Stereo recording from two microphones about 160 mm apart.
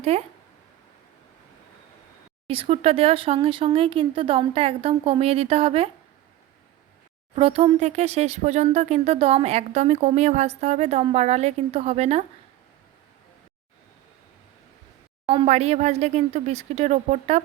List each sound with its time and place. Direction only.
0.0 s speech: 40° right (ahead or behind)
2.5 s speech: 35° right (ahead or behind)
7.3 s speech: 35° right (ahead or behind)
15.3 s speech: 40° right (ahead or behind)